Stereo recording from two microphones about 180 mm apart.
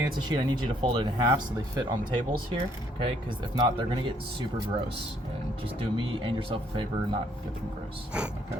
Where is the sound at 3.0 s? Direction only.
30° right (ahead or behind).